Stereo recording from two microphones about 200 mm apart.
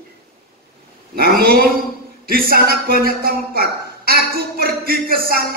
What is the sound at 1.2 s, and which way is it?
A man's voice, 50° right (ahead or behind).